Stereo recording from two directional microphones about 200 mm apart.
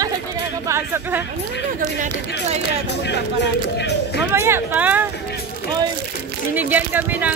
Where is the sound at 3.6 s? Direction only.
60° left (ahead or behind).